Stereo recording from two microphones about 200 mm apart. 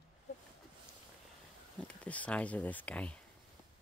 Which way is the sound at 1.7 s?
5° left (ahead or behind).